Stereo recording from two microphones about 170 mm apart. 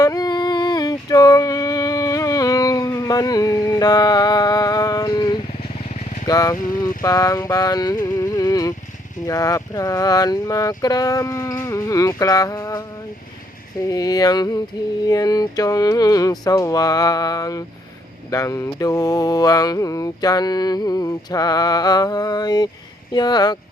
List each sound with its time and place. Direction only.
0.0 s a sound: 20° left (ahead or behind)
6.2 s speech: 20° left (ahead or behind)
7.0 s mantra: 20° left (ahead or behind)
13.8 s mantra: 20° left (ahead or behind)